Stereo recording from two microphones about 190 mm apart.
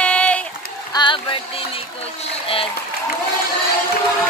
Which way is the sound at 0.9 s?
25° left (ahead or behind).